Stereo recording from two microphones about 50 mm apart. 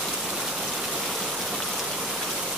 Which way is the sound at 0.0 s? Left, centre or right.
Centre.